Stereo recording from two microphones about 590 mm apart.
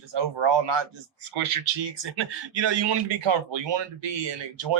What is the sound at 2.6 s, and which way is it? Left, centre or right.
Speech, right.